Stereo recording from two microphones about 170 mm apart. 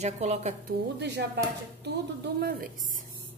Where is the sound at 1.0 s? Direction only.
85° right.